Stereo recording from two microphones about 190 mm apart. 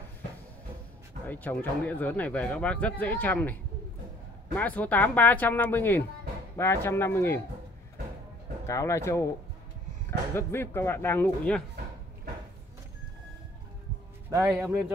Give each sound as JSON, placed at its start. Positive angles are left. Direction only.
{"t": 1.2, "sound": "speech", "side_deg": 10}
{"t": 4.6, "sound": "speech", "side_deg": 10}
{"t": 8.6, "sound": "speech", "side_deg": 15}
{"t": 10.3, "sound": "speech", "side_deg": 10}
{"t": 14.3, "sound": "a man's voice", "side_deg": -15}